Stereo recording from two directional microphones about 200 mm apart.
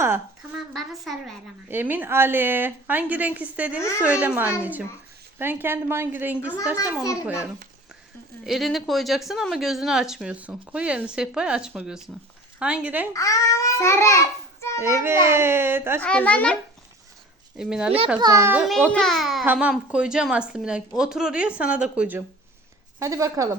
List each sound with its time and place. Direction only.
0.7 s a woman's voice: centre (ahead or behind)
3.8 s a child's voice: 15° left (ahead or behind)
4.0 s a woman's voice: 5° right (ahead or behind)
7.0 s a child's voice: 15° left (ahead or behind)
8.4 s speech: centre (ahead or behind)
13.1 s a child's voice: 15° left (ahead or behind)
14.8 s a woman's voice: 15° right (ahead or behind)
16.0 s speech: 5° left (ahead or behind)
17.6 s speech: 5° right (ahead or behind)
18.2 s a woman's voice: 15° right (ahead or behind)